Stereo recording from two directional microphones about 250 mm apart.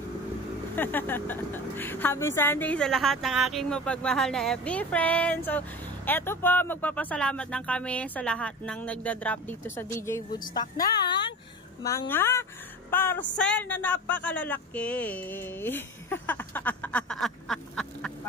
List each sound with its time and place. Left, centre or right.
0.7 s a woman's voice: centre